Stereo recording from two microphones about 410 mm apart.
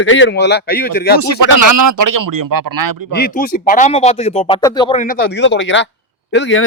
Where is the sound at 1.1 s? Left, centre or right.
Right.